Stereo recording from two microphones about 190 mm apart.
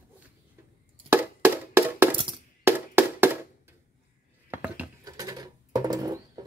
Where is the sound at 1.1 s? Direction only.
10° right (ahead or behind).